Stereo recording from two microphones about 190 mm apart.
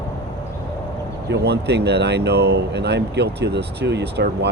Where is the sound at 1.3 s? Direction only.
60° right (ahead or behind).